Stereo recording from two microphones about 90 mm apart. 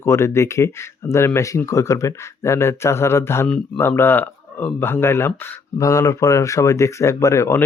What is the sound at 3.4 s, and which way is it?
Speech, 10° left (ahead or behind).